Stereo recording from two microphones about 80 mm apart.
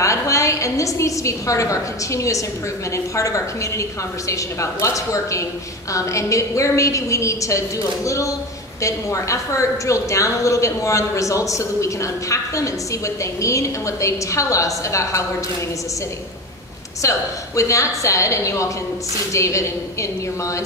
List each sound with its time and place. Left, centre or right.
0.0 s a woman's voice: left
17.0 s a woman's voice: left